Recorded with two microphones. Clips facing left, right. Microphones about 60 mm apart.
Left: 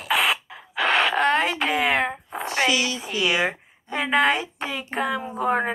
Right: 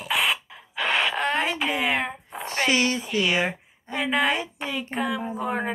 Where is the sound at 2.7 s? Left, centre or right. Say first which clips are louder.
Right 2 dB; right.